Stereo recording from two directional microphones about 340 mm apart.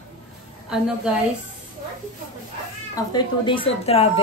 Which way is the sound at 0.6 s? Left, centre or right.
Centre.